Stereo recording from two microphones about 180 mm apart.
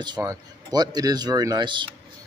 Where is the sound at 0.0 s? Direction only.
20° right (ahead or behind).